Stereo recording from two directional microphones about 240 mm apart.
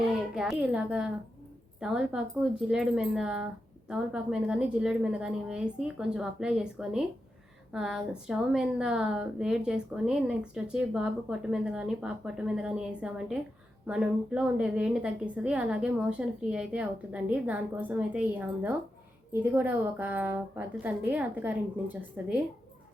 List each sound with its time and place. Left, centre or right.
0.3 s a woman's voice: centre